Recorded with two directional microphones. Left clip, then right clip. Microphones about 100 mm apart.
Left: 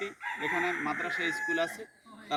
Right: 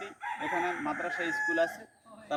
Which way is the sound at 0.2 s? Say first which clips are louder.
Even; 40° right (ahead or behind).